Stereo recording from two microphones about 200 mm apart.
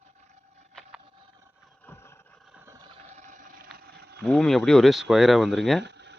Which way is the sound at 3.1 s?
40° right (ahead or behind).